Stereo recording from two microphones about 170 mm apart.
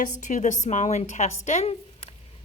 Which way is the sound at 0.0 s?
45° left (ahead or behind).